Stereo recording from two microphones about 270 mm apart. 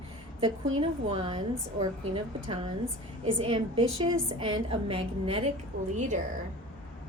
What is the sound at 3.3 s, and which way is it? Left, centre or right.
A woman's voice, centre.